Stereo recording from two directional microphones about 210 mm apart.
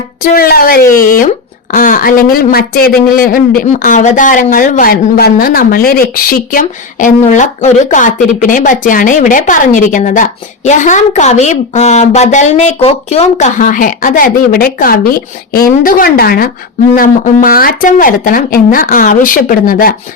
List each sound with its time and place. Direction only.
0.2 s speech: 45° left (ahead or behind)
0.9 s speech: 15° left (ahead or behind)
1.7 s speech: 40° left (ahead or behind)